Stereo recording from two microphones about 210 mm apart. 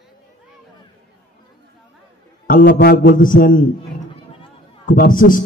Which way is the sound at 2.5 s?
45° left (ahead or behind).